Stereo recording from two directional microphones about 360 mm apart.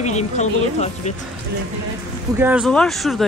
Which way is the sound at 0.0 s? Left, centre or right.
Centre.